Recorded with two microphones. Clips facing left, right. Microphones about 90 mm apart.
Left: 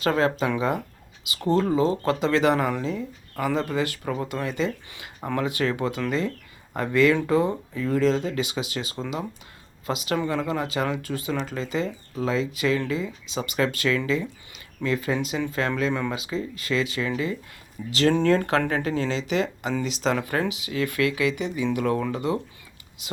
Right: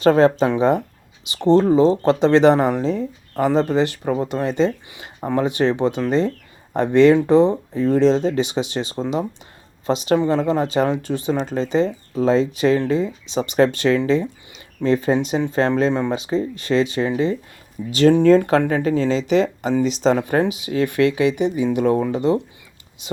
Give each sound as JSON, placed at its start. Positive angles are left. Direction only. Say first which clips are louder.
{"t": 0.0, "sound": "speech", "louder": "right 8 dB", "side_deg": -30}